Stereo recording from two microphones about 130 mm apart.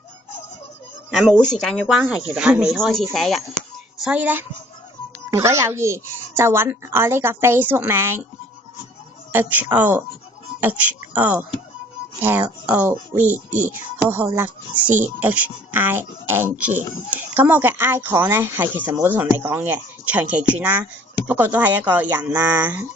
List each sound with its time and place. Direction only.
1.6 s speech: 5° left (ahead or behind)
4.0 s a woman's voice: 10° right (ahead or behind)
9.3 s speech: 15° right (ahead or behind)
13.1 s speech: 65° right (ahead or behind)
13.7 s speech: 15° right (ahead or behind)